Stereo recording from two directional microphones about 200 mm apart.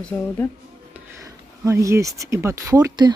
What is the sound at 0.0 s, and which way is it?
Speech, 10° left (ahead or behind).